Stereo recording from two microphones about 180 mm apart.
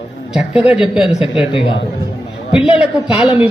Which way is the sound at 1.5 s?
30° left (ahead or behind).